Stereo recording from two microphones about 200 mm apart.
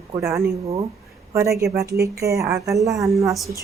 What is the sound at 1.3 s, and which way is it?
Speech, 15° right (ahead or behind).